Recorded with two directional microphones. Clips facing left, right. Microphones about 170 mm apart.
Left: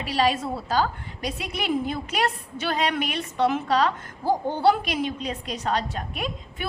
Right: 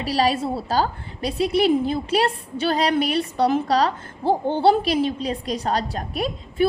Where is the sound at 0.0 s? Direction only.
35° right (ahead or behind).